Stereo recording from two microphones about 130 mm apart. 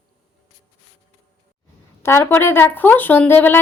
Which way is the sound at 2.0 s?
20° left (ahead or behind).